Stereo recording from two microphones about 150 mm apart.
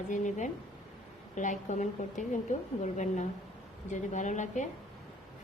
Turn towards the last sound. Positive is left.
turn(degrees=55)  # may be behind; listen again after turning